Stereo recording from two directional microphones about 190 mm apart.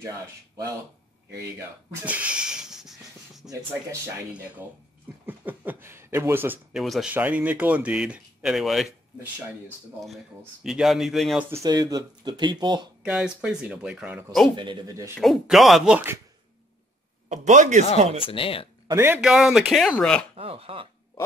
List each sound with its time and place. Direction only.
2.0 s a sound: 5° right (ahead or behind)
4.3 s speech: 10° right (ahead or behind)
9.9 s speech: centre (ahead or behind)
11.5 s speech: 20° right (ahead or behind)
13.0 s speech: 5° right (ahead or behind)
14.6 s speech: 25° right (ahead or behind)
15.1 s speech: centre (ahead or behind)
17.3 s speech: 40° right (ahead or behind)
17.8 s speech: 30° left (ahead or behind)
18.9 s speech: 10° right (ahead or behind); by 20.2 s 5° left (ahead or behind)
20.3 s speech: 30° right (ahead or behind)